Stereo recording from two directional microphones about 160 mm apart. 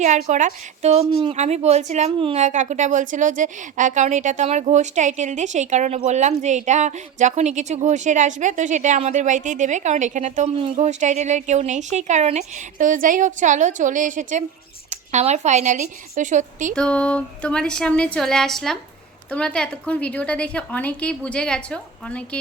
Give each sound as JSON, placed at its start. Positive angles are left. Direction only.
{"t": 0.0, "sound": "a woman's voice", "side_deg": -50}
{"t": 16.7, "sound": "a woman's voice", "side_deg": 5}